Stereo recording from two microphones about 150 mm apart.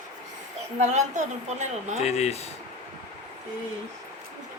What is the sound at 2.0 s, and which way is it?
Speech, 45° left (ahead or behind).